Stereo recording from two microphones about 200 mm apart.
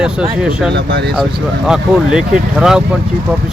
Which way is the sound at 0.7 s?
55° right (ahead or behind).